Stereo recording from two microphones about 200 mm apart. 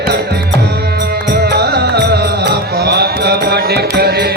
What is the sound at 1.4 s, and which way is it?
Music, 55° right (ahead or behind).